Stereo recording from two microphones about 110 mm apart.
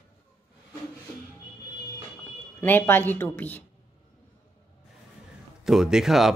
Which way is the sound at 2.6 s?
20° left (ahead or behind).